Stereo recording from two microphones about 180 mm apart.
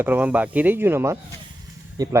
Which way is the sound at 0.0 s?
10° right (ahead or behind).